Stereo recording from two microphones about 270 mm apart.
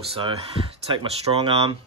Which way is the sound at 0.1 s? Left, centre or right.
Right.